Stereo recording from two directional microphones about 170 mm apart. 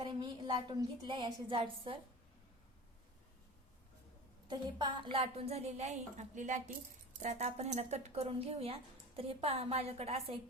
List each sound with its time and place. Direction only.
0.0 s a woman's voice: 25° right (ahead or behind)
4.4 s speech: 25° right (ahead or behind)